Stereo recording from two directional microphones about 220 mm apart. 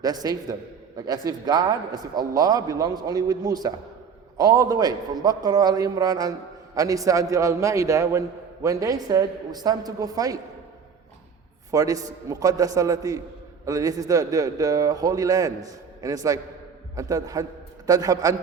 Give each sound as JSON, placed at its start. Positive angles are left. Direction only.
{"t": 0.0, "sound": "a man's voice", "side_deg": -15}
{"t": 11.7, "sound": "a man's voice", "side_deg": -15}